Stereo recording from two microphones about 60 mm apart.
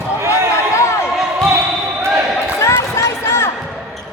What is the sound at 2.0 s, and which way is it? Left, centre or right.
Basketball bounce, right.